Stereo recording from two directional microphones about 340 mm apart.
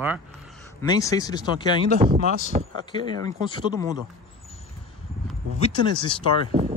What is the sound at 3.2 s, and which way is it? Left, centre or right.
Speech, centre.